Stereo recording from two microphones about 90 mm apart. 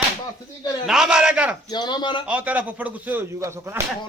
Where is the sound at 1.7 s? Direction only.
55° left (ahead or behind).